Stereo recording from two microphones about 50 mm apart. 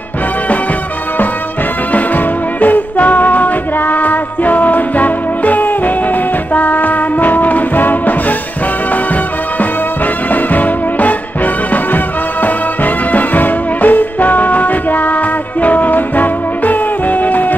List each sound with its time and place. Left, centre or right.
1.9 s music: left
10.3 s music: left